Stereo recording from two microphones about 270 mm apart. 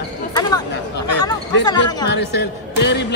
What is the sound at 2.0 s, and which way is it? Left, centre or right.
A woman's voice, left.